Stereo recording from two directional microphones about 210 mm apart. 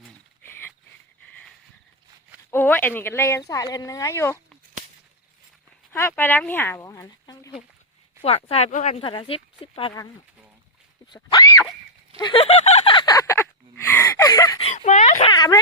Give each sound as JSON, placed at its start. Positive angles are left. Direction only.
{"t": 0.4, "sound": "dog", "side_deg": 10}
{"t": 2.5, "sound": "speech", "side_deg": 10}
{"t": 5.9, "sound": "speech", "side_deg": 10}
{"t": 8.2, "sound": "speech", "side_deg": 30}
{"t": 11.1, "sound": "a sound", "side_deg": 20}
{"t": 14.6, "sound": "a sound", "side_deg": 30}
{"t": 15.3, "sound": "speech", "side_deg": 20}